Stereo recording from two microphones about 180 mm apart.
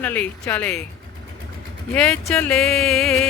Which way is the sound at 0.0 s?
10° left (ahead or behind).